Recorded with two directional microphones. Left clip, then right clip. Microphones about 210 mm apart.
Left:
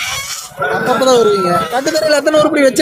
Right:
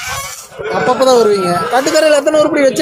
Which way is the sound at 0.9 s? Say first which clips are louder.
Right 1 dB; 5° right (ahead or behind).